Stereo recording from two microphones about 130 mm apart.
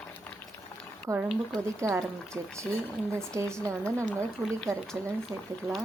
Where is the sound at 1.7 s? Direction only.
20° right (ahead or behind).